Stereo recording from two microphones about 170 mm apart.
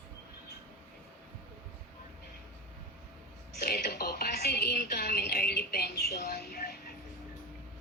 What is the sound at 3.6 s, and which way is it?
Music, 70° left (ahead or behind).